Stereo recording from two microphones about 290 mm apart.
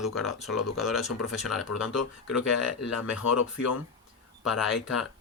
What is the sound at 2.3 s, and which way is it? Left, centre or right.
Speech, left.